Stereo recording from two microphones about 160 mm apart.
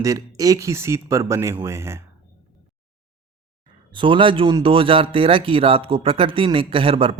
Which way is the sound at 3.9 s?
30° right (ahead or behind).